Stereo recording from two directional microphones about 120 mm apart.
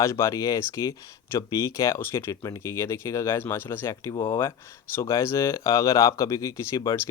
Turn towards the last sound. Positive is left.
turn(degrees=30)  # may be behind; listen again after turning